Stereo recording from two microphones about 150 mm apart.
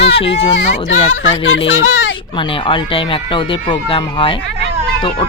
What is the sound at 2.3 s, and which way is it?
A woman's voice, 35° left (ahead or behind).